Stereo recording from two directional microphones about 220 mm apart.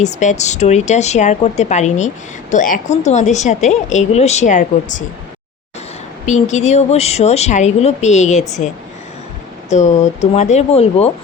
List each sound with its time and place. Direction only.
0.0 s a woman's voice: 35° left (ahead or behind)
6.2 s a woman's voice: 30° left (ahead or behind)
9.6 s a woman's voice: 30° left (ahead or behind)